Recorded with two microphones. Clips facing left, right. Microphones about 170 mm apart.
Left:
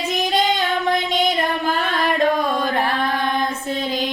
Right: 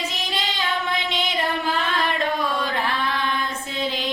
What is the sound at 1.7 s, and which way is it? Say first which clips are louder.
Chant: left 4 dB; 45° left (ahead or behind).